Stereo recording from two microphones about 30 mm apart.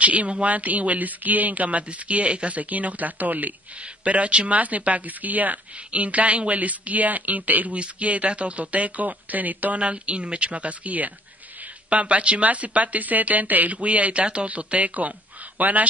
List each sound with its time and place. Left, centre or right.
0.0 s a woman's voice: right
4.0 s speech: right
5.9 s speech: right
9.8 s speech: right
11.9 s speech: right
12.4 s speech: right
14.2 s speech: right
15.0 s speech: right